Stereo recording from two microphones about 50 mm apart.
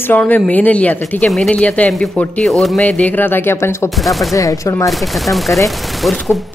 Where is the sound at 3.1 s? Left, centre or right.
Left.